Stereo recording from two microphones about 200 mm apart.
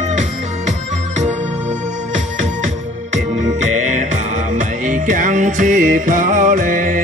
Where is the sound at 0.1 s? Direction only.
35° right (ahead or behind).